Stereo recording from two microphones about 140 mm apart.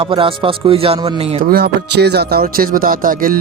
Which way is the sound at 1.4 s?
90° right.